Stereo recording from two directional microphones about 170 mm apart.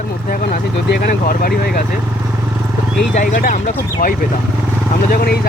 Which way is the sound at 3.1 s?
55° left (ahead or behind).